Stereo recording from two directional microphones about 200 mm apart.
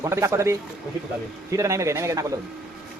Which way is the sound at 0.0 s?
15° right (ahead or behind).